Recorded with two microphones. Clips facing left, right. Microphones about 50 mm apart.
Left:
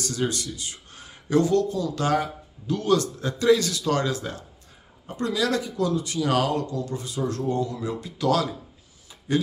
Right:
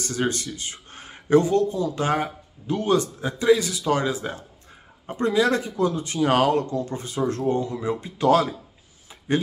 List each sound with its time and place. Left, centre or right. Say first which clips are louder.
0.0 s speech: right 2 dB; right